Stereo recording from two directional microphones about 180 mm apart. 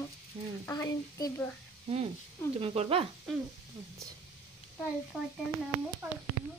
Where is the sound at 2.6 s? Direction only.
35° right (ahead or behind).